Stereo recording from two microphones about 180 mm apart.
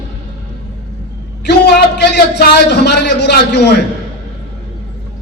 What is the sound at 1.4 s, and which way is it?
A man's voice, 65° left (ahead or behind).